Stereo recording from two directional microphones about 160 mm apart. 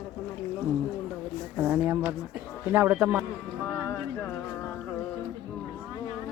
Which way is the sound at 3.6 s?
10° left (ahead or behind).